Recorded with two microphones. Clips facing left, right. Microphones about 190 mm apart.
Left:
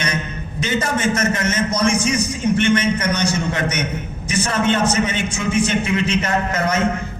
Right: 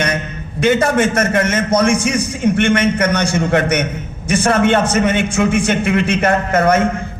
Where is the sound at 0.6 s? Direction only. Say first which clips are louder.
Right 7 dB; 60° right (ahead or behind).